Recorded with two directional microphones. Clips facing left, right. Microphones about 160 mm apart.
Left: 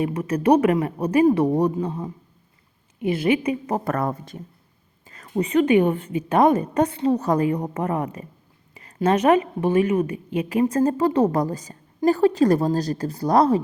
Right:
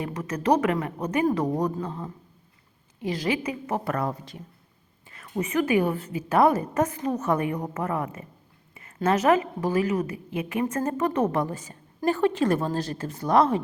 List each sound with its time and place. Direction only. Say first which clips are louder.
0.1 s a woman's voice: left 2 dB; 30° left (ahead or behind)
1.7 s a woman's voice: left 5 dB; 15° left (ahead or behind)
3.8 s speech: left 4 dB; 50° left (ahead or behind)
5.0 s a woman's voice: left 5 dB; 40° left (ahead or behind)